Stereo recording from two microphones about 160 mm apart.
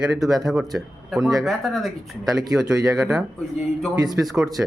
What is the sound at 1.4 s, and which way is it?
Speech, centre (ahead or behind).